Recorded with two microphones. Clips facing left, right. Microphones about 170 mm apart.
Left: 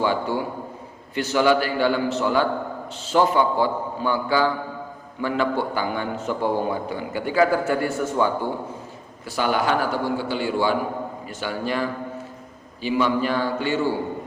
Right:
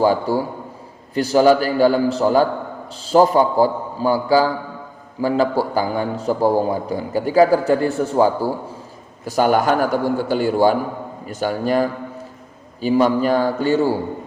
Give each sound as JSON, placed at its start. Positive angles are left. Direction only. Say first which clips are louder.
{"t": 0.0, "sound": "a man's voice", "louder": "right 6 dB", "side_deg": -40}